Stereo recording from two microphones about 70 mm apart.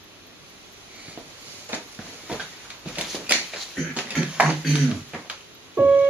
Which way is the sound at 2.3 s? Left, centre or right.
Centre.